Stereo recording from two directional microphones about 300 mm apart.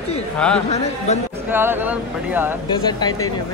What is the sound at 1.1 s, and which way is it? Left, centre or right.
Speech, left.